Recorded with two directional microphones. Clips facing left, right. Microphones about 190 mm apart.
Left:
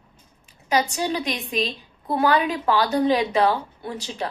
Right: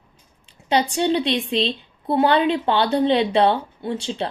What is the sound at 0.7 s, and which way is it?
A woman's voice, 30° right (ahead or behind).